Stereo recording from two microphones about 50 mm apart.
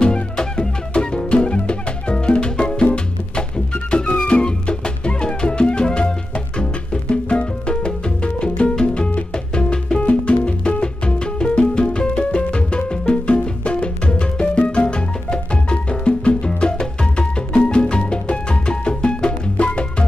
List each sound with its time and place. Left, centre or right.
0.0 s music: centre